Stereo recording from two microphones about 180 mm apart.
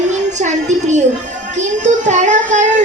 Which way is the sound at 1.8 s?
45° right (ahead or behind).